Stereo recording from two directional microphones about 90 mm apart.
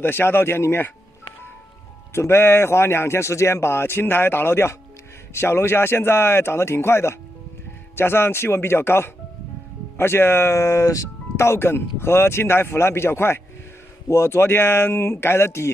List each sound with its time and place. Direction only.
0.0 s a man's voice: 25° left (ahead or behind)
2.1 s a man's voice: 30° left (ahead or behind)